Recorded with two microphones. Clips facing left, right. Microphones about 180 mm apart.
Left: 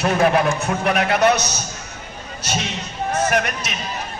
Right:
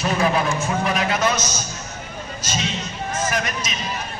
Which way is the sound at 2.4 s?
65° left (ahead or behind).